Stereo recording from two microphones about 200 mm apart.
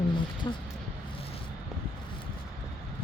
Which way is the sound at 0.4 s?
20° left (ahead or behind).